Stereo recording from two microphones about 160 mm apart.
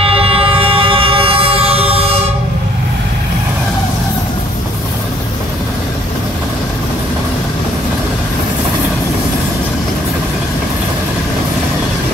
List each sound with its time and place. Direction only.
0.0 s music: 35° right (ahead or behind)